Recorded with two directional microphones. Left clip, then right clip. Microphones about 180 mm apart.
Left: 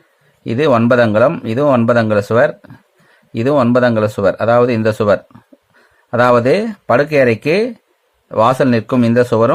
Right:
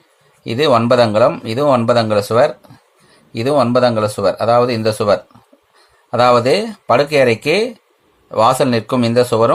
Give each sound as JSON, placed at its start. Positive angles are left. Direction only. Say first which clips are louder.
{"t": 0.4, "sound": "speech", "louder": "even", "side_deg": 25}